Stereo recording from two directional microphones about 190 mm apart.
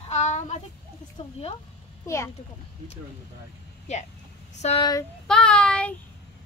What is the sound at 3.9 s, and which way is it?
Speech, 35° left (ahead or behind).